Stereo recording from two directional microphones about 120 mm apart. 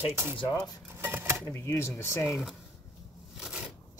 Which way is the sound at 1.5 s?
25° left (ahead or behind).